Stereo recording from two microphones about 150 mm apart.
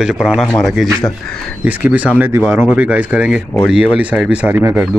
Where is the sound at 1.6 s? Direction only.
10° right (ahead or behind).